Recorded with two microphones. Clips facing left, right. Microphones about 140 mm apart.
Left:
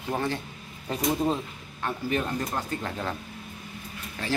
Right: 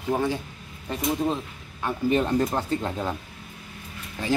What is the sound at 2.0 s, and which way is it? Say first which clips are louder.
Speech: right 8 dB; 25° right (ahead or behind).